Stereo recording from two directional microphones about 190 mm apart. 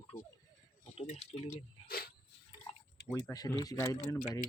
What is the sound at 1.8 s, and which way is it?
Cricket, 50° left (ahead or behind).